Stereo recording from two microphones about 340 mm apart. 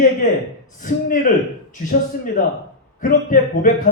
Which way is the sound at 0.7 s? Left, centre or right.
Left.